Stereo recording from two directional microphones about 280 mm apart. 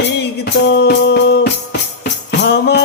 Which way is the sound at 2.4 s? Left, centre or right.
Left.